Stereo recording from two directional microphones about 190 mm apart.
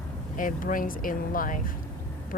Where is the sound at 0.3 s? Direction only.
45° left (ahead or behind).